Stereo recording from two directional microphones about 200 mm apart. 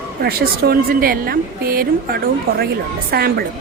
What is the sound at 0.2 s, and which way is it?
A woman's voice, 50° right (ahead or behind).